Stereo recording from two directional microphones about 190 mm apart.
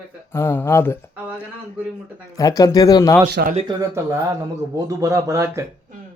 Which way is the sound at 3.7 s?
15° right (ahead or behind).